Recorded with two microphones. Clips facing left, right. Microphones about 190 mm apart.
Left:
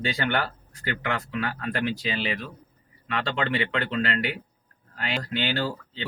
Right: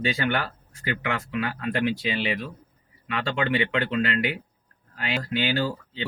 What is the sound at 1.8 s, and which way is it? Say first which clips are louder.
Speech: right 3 dB; 35° left (ahead or behind).